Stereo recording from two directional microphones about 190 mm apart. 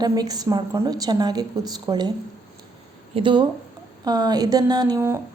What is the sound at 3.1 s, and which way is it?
A woman's voice, 25° right (ahead or behind).